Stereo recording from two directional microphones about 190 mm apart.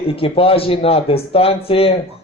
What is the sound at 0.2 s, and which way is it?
Speech, 30° left (ahead or behind).